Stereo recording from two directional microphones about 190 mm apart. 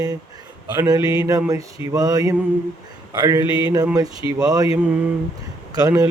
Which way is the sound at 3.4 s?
25° left (ahead or behind).